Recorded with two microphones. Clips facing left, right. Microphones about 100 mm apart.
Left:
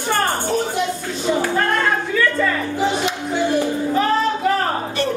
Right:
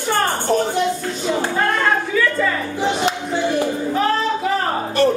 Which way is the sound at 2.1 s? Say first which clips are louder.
Even; 5° right (ahead or behind).